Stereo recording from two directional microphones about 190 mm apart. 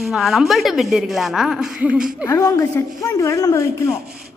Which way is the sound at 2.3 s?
15° left (ahead or behind).